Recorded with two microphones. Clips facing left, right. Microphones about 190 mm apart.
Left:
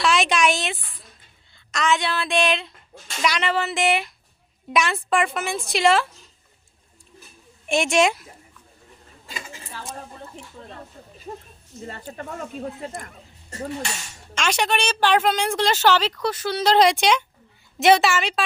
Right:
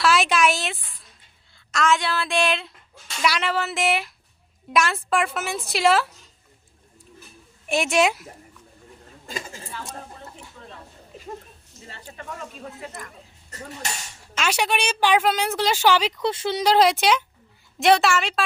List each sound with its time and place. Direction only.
0.0 s speech: centre (ahead or behind)
7.7 s speech: 5° right (ahead or behind)
9.2 s a sound: 45° right (ahead or behind)
12.1 s speech: 40° left (ahead or behind)
14.3 s a woman's voice: 5° right (ahead or behind); by 16.6 s 25° right (ahead or behind)
16.6 s speech: 10° right (ahead or behind)